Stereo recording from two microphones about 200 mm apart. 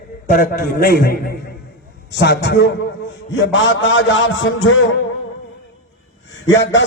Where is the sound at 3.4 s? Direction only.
70° left (ahead or behind).